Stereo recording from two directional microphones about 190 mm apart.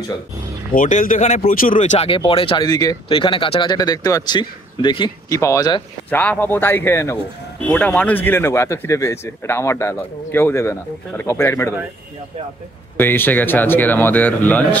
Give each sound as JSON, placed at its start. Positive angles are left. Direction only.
{"t": 0.7, "sound": "speech", "side_deg": 45}
{"t": 12.9, "sound": "speech", "side_deg": 10}